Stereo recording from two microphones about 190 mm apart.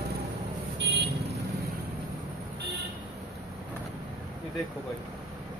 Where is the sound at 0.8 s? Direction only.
65° right (ahead or behind).